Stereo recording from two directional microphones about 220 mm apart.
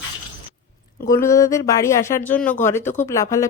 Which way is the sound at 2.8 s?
35° left (ahead or behind).